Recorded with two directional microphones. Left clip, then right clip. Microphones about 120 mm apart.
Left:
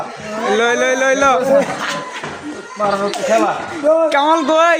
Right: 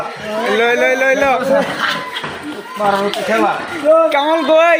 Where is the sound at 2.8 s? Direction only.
15° left (ahead or behind).